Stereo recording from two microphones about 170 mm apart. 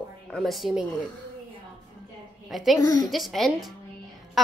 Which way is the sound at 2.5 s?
Centre (ahead or behind).